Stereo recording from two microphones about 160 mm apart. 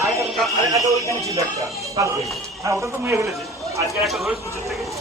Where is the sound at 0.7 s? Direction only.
20° right (ahead or behind).